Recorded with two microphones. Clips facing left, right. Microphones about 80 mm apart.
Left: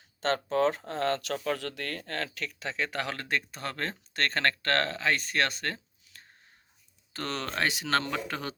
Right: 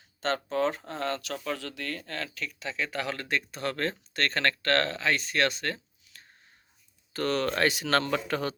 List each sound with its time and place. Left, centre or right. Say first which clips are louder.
0.5 s speech: left 2 dB; left
7.9 s speech: right 3 dB; centre